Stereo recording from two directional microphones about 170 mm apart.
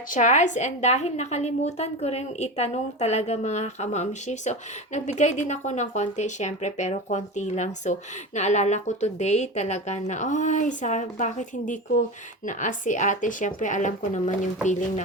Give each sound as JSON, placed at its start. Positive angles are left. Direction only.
{"t": 0.1, "sound": "a woman's voice", "side_deg": 45}